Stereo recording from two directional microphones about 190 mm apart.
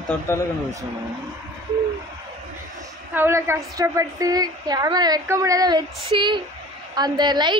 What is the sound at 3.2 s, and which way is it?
A woman's voice, 15° right (ahead or behind).